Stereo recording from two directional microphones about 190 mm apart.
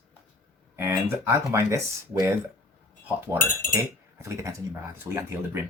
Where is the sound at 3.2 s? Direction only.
10° right (ahead or behind).